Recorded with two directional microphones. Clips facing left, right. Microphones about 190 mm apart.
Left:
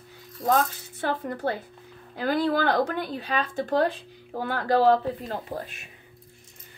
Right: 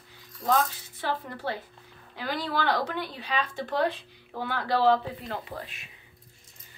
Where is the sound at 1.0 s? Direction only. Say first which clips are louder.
Left 4 dB; 50° left (ahead or behind).